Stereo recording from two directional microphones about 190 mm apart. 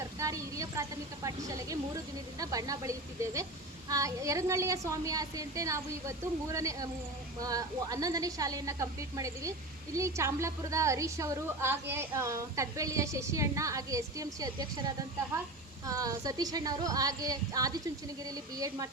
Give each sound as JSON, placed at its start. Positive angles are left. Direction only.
{"t": 0.2, "sound": "a woman's voice", "side_deg": -15}